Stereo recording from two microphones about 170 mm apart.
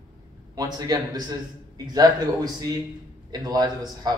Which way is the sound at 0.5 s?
20° right (ahead or behind).